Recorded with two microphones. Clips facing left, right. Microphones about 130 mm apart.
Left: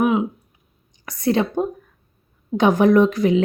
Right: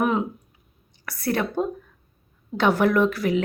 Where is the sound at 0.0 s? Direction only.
5° left (ahead or behind).